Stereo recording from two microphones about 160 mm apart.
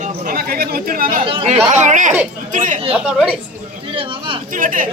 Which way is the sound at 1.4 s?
50° right (ahead or behind).